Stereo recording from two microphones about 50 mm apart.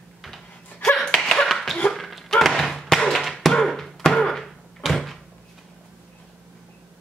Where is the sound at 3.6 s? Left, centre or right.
Centre.